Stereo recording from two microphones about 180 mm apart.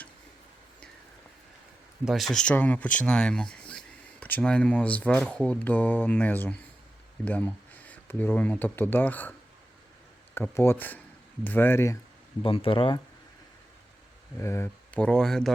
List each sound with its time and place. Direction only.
2.0 s speech: centre (ahead or behind)
10.3 s speech: 10° left (ahead or behind)
12.4 s speech: 30° left (ahead or behind)
14.3 s speech: 15° left (ahead or behind)